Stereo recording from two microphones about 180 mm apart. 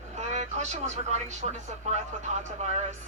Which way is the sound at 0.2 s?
40° right (ahead or behind).